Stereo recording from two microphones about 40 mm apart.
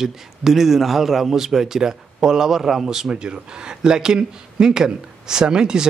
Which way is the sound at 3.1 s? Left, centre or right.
Right.